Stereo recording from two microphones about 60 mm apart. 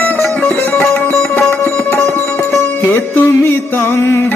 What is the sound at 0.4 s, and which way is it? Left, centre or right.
Sitar, left.